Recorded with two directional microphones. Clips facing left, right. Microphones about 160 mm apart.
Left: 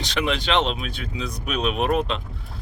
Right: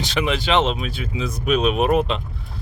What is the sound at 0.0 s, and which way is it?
Speech, 5° right (ahead or behind).